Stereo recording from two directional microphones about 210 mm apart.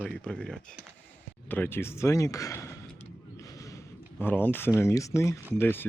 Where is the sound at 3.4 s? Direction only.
15° left (ahead or behind).